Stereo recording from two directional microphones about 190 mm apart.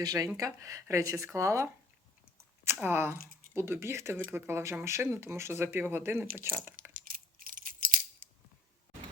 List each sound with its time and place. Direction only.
0.0 s speech: 20° right (ahead or behind)
7.0 s coin: 45° right (ahead or behind)